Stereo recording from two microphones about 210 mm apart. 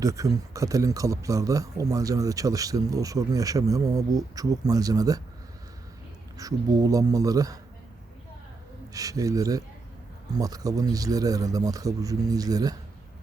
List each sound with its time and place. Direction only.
0.0 s a man's voice: 15° right (ahead or behind)
6.3 s a man's voice: 15° right (ahead or behind)
8.9 s a man's voice: 15° right (ahead or behind)